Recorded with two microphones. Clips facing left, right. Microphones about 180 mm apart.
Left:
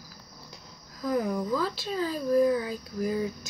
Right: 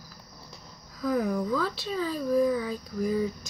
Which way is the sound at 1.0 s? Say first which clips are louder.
Right 1 dB; 20° left (ahead or behind).